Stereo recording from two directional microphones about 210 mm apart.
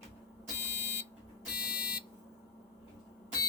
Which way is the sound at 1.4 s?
5° right (ahead or behind).